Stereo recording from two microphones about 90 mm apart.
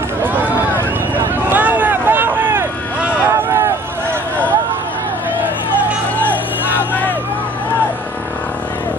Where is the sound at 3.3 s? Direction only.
25° right (ahead or behind).